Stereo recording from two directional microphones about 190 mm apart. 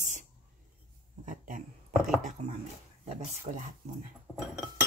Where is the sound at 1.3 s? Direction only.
45° right (ahead or behind).